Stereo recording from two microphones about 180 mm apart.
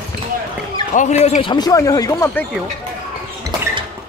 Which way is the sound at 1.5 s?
20° left (ahead or behind).